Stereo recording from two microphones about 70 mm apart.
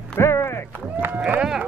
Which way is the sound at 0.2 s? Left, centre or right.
Left.